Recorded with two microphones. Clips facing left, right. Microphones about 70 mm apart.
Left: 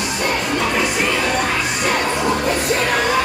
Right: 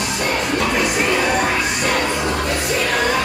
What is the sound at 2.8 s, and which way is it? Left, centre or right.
Music, centre.